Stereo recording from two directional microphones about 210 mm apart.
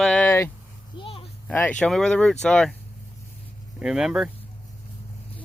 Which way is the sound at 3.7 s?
5° right (ahead or behind).